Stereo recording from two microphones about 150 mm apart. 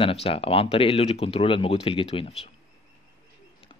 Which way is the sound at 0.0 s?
40° left (ahead or behind).